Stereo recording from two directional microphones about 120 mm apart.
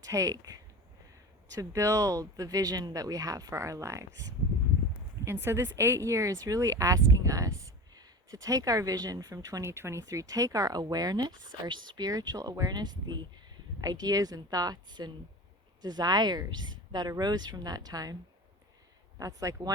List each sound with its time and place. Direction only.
0.0 s a woman's voice: 25° right (ahead or behind)
19.2 s speech: 25° right (ahead or behind)